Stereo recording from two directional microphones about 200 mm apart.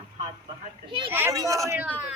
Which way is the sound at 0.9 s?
25° right (ahead or behind).